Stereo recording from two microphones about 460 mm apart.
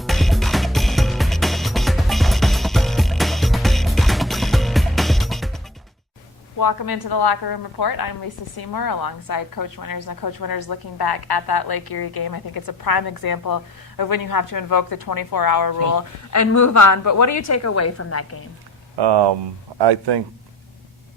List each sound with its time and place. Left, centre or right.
0.0 s music: centre
6.6 s a woman's voice: left
18.9 s speech: right